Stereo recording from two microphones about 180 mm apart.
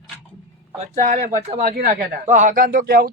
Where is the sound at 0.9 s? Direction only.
45° right (ahead or behind).